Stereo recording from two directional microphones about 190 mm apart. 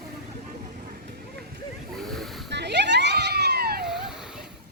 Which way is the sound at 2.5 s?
60° right (ahead or behind).